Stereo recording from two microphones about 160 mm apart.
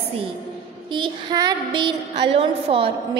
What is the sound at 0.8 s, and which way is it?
A woman's voice, 30° right (ahead or behind).